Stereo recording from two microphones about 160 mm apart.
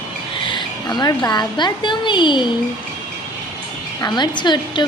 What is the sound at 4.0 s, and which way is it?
Speech, 25° left (ahead or behind).